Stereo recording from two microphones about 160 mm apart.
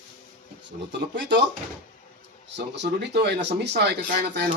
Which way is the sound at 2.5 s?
90° right.